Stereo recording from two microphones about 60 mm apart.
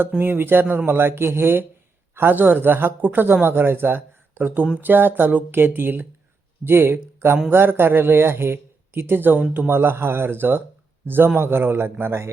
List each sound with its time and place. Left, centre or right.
0.2 s a man's voice: right